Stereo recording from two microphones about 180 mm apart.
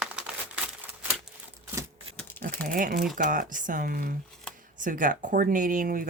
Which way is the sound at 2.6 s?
55° right (ahead or behind).